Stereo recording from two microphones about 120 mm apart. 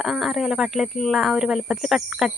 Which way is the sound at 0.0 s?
Centre (ahead or behind).